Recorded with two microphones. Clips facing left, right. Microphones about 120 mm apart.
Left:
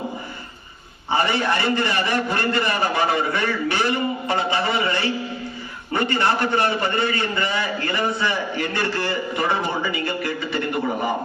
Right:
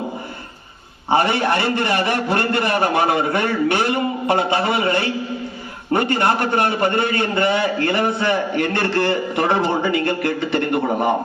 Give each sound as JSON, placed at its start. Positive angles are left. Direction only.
{"t": 1.1, "sound": "a man's voice", "side_deg": -60}